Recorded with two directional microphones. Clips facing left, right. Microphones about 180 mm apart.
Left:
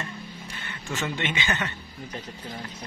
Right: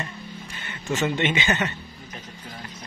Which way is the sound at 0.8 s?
20° right (ahead or behind).